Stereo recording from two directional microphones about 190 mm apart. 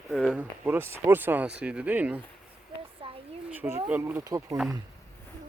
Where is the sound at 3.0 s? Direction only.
30° right (ahead or behind).